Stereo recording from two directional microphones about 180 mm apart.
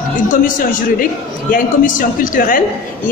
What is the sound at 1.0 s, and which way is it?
A man's voice, 50° left (ahead or behind).